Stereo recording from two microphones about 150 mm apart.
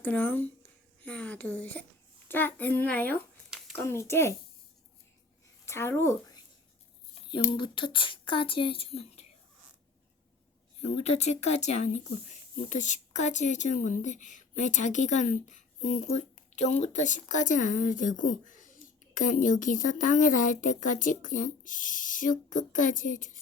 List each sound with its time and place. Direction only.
0.0 s speech: 10° left (ahead or behind)
5.6 s speech: 15° left (ahead or behind)
7.1 s speech: 35° left (ahead or behind)
10.8 s speech: 45° left (ahead or behind)